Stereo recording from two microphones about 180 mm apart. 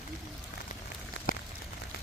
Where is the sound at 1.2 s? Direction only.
90° left.